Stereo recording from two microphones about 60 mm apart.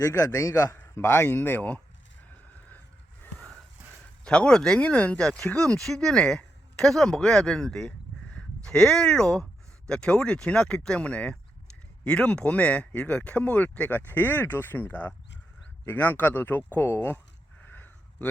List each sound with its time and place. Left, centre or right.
0.0 s a man's voice: left
0.9 s speech: left
4.2 s speech: centre; by 17.2 s left
17.6 s a sound: left